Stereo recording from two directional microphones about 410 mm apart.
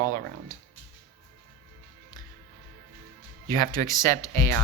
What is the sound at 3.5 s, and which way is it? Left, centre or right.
Speech, centre.